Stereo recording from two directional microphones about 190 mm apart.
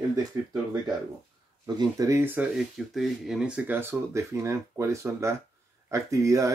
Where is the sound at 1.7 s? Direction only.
15° right (ahead or behind).